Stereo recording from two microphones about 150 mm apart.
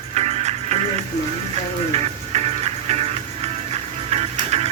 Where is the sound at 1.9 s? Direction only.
45° right (ahead or behind).